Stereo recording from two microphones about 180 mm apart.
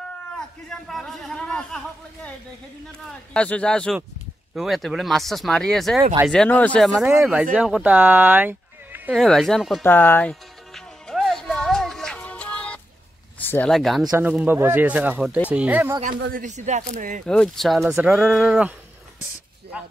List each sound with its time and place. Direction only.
0.4 s speech: 5° left (ahead or behind)
3.1 s speech: 5° left (ahead or behind); by 9.1 s 10° right (ahead or behind)
9.1 s speech: centre (ahead or behind)
9.8 s music: 10° left (ahead or behind)
13.4 s speech: 10° left (ahead or behind)
14.0 s speech: 15° right (ahead or behind)
16.4 s speech: 40° right (ahead or behind)
17.3 s speech: 5° left (ahead or behind)